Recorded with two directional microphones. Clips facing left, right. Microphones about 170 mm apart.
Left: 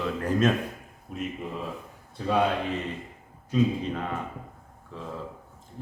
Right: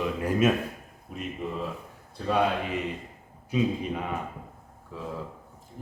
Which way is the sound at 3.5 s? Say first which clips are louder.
Left 2 dB; 10° right (ahead or behind).